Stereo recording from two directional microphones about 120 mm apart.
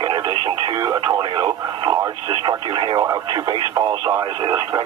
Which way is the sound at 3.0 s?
35° right (ahead or behind).